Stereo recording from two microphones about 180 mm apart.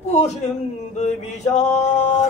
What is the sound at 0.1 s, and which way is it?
Music, 40° left (ahead or behind).